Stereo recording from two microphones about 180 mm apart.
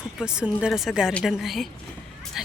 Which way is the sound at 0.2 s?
5° right (ahead or behind).